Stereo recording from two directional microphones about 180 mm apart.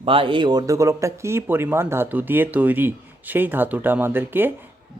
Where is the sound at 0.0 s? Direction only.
30° right (ahead or behind).